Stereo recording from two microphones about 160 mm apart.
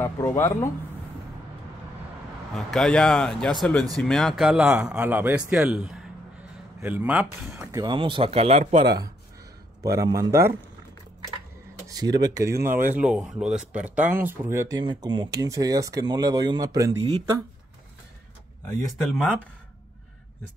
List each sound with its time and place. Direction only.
0.0 s speech: 15° left (ahead or behind)
2.5 s speech: 5° left (ahead or behind); by 8.8 s 45° right (ahead or behind)
8.8 s speech: 25° right (ahead or behind)
11.9 s speech: 25° right (ahead or behind)
14.8 s speech: 30° right (ahead or behind)
19.0 s speech: 5° left (ahead or behind)